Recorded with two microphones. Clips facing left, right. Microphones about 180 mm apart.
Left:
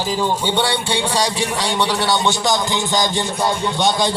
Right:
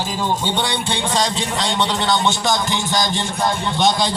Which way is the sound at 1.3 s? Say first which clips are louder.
Left 1 dB; 10° left (ahead or behind).